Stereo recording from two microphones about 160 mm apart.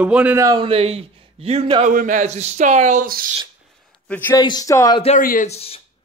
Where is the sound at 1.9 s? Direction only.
55° right (ahead or behind).